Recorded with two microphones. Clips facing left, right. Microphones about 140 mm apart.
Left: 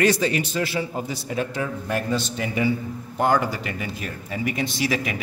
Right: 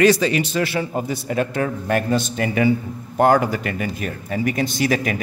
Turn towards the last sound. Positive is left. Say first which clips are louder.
# right 4 dB
turn(degrees=-45)  # may be behind; listen again after turning